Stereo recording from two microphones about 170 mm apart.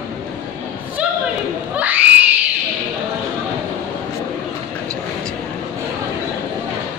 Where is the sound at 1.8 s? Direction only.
10° right (ahead or behind).